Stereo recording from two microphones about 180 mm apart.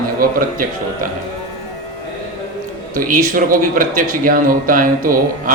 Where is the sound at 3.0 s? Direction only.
50° right (ahead or behind).